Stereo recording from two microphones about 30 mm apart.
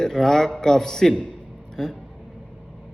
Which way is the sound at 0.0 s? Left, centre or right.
Centre.